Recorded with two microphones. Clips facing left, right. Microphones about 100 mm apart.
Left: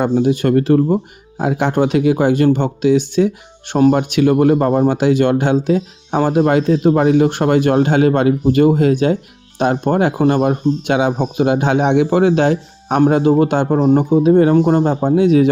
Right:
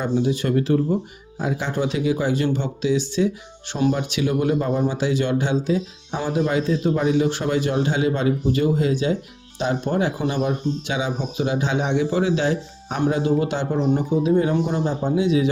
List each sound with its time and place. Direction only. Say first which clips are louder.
0.0 s speech: left 7 dB; 60° left (ahead or behind)